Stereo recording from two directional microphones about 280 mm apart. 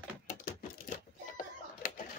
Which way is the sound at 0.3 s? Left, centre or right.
Left.